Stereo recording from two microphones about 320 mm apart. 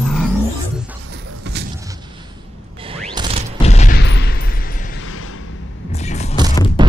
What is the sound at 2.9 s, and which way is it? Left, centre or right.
Mechanisms, centre.